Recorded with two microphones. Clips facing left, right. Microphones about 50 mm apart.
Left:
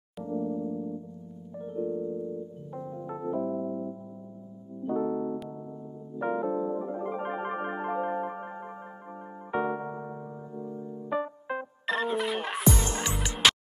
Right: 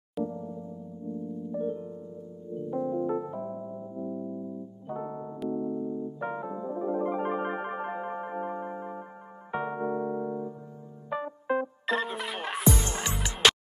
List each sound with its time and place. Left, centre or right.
0.5 s music: left
1.9 s music: left
2.8 s music: right
3.3 s electric piano: centre
4.8 s keyboard: centre
6.2 s music: centre
6.9 s keyboard: right
9.5 s electric piano: centre
9.8 s music: centre
11.1 s music: centre